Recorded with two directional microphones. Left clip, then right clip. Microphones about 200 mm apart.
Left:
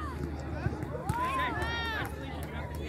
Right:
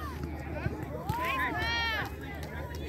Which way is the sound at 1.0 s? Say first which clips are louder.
Even; 50° left (ahead or behind).